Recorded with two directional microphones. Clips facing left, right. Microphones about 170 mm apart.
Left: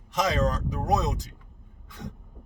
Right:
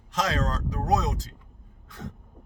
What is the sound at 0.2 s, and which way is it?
Speech, 15° left (ahead or behind).